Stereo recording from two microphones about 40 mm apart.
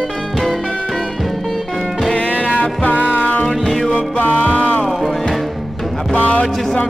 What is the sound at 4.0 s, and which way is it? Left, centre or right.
Music, left.